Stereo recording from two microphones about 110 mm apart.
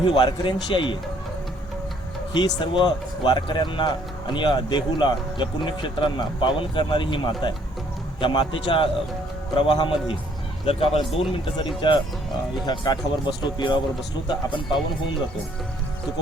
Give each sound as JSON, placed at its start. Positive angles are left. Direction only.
{"t": 0.0, "sound": "speech", "side_deg": 45}
{"t": 2.3, "sound": "speech", "side_deg": 45}
{"t": 10.7, "sound": "a man's voice", "side_deg": 60}